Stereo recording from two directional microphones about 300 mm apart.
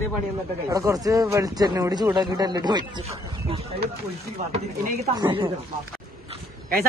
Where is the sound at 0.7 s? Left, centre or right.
Centre.